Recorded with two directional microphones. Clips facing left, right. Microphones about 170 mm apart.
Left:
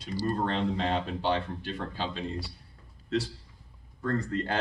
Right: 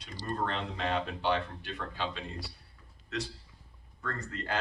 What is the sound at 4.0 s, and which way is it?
Speech, 30° left (ahead or behind).